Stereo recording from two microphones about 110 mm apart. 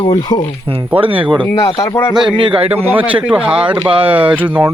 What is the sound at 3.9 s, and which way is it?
Speech, 55° right (ahead or behind).